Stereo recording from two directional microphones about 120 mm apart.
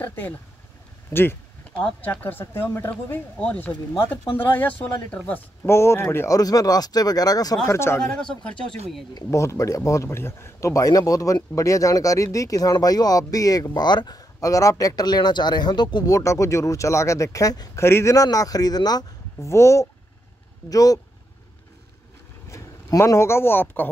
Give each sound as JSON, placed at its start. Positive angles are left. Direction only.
{"t": 0.0, "sound": "speech", "side_deg": 15}
{"t": 1.1, "sound": "a sound", "side_deg": 20}
{"t": 1.8, "sound": "speech", "side_deg": 10}
{"t": 7.6, "sound": "speech", "side_deg": 20}
{"t": 8.1, "sound": "speech", "side_deg": 5}
{"t": 9.1, "sound": "speech", "side_deg": 25}
{"t": 22.5, "sound": "speech", "side_deg": 25}